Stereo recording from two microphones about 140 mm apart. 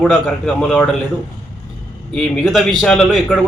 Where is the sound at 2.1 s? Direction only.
5° left (ahead or behind).